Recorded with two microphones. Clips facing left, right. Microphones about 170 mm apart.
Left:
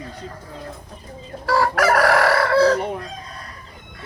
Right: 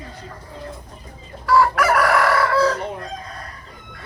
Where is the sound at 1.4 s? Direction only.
40° left (ahead or behind).